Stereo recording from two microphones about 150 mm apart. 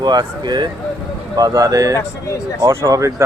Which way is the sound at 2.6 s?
20° right (ahead or behind).